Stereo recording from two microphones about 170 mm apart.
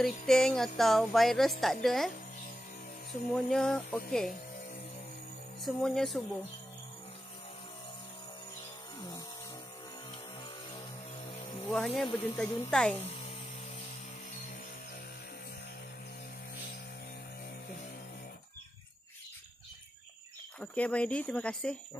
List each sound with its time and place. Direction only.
0.0 s a woman's voice: 5° left (ahead or behind)
3.3 s a woman's voice: 5° left (ahead or behind)
5.6 s a woman's voice: centre (ahead or behind)
11.6 s a woman's voice: 5° left (ahead or behind)
12.4 s a woman's voice: 20° left (ahead or behind)
12.7 s a woman's voice: 5° left (ahead or behind)
20.6 s speech: 10° left (ahead or behind)